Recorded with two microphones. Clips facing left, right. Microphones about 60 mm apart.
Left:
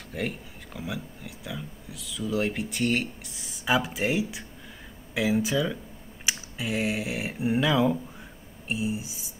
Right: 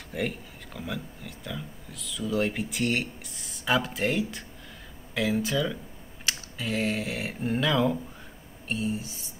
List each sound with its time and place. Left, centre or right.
0.1 s speech: centre